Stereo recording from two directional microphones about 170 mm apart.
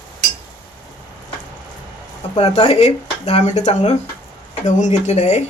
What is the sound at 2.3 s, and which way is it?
Speech, 40° left (ahead or behind).